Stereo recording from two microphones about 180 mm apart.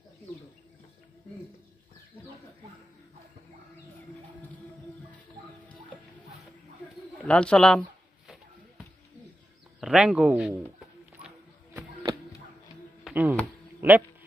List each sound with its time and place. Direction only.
7.2 s speech: 5° left (ahead or behind)
9.8 s speech: 5° right (ahead or behind)
13.0 s a sound: 10° right (ahead or behind)
13.7 s speech: 10° right (ahead or behind)